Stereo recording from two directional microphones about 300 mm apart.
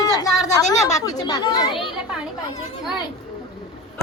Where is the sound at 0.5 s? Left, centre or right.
Centre.